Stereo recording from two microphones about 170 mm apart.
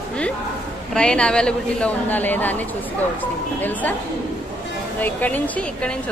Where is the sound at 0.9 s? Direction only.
5° left (ahead or behind).